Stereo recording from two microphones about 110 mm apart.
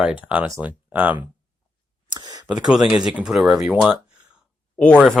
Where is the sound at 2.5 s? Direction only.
5° right (ahead or behind).